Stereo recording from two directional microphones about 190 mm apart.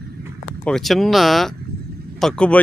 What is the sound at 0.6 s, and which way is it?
Speech, centre (ahead or behind).